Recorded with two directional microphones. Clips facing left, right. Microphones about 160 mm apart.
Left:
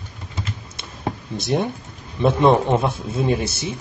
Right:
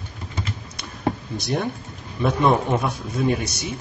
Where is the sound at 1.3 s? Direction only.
25° left (ahead or behind).